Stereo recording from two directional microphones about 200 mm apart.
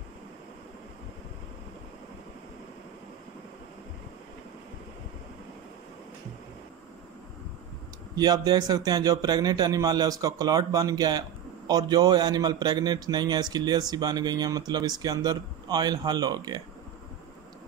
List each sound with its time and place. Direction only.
8.2 s a man's voice: 20° right (ahead or behind)